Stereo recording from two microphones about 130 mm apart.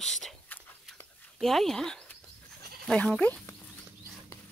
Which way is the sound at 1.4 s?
Centre (ahead or behind).